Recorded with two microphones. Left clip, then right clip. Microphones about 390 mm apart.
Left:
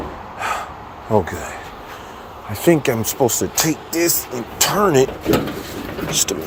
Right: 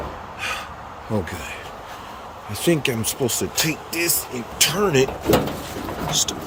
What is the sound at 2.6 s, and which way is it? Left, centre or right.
Speech, centre.